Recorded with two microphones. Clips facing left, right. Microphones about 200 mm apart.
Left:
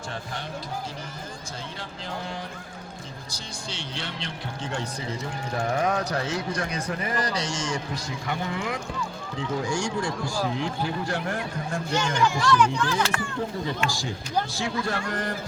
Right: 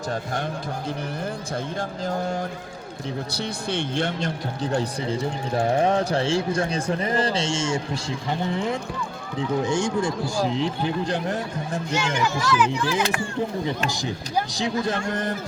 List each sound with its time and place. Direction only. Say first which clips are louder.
1.8 s speech: right 8 dB; 45° right (ahead or behind)
3.3 s speech: right 10 dB; 60° right (ahead or behind); by 11.8 s 20° right (ahead or behind)
11.9 s speech: left 1 dB; 10° right (ahead or behind)